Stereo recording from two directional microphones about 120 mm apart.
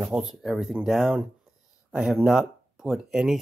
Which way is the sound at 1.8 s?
5° right (ahead or behind).